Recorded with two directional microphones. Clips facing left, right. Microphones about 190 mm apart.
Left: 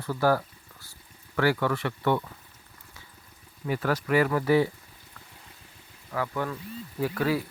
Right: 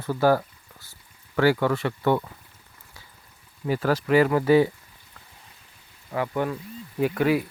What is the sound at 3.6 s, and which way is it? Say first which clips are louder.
Speech: right 4 dB; 35° right (ahead or behind).